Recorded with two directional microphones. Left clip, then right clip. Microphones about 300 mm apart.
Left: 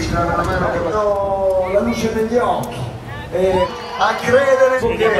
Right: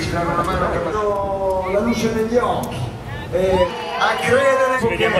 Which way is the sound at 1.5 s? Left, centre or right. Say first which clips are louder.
Left 3 dB; centre.